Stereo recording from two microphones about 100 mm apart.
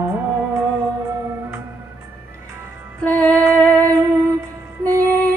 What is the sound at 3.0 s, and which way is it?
Music, 15° left (ahead or behind).